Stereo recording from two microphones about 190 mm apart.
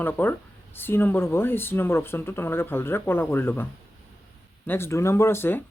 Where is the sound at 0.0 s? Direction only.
10° left (ahead or behind).